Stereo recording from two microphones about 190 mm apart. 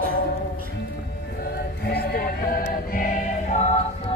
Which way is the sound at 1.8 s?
60° left (ahead or behind).